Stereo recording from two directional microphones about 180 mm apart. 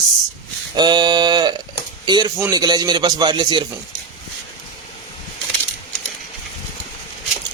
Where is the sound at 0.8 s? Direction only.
25° right (ahead or behind).